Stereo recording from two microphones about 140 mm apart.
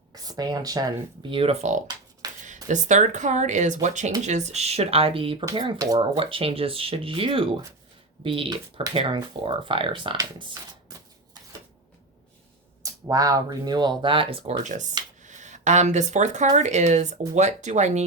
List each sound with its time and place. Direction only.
0.1 s speech: 30° right (ahead or behind)
1.4 s speech: 45° right (ahead or behind)
10.3 s a sound: 30° right (ahead or behind)
12.8 s speech: 25° right (ahead or behind); by 14.6 s 40° right (ahead or behind)
14.6 s speech: 60° right (ahead or behind)